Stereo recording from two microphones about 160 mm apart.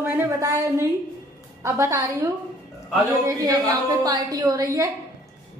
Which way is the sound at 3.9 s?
25° right (ahead or behind).